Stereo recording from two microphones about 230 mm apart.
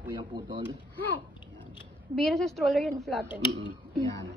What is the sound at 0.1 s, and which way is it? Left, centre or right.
Speech, centre.